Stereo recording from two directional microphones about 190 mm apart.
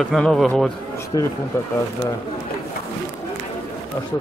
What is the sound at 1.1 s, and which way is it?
Speech, 20° left (ahead or behind).